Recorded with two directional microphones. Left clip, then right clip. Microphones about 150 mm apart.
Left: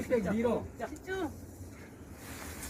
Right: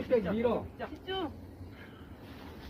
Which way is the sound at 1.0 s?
45° left (ahead or behind).